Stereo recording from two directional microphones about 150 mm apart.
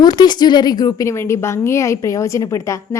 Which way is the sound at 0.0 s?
25° left (ahead or behind).